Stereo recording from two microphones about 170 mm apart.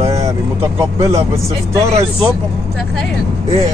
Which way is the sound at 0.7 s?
15° right (ahead or behind).